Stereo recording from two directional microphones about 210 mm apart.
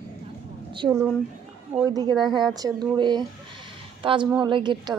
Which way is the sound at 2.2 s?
Centre (ahead or behind).